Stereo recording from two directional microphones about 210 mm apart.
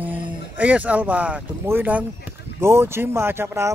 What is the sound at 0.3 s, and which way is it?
Speech, 5° right (ahead or behind).